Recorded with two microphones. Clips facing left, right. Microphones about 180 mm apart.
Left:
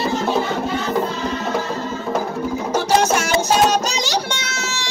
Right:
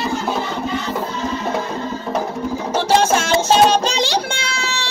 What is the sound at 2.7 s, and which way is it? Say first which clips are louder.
Music: right 1 dB; 30° right (ahead or behind).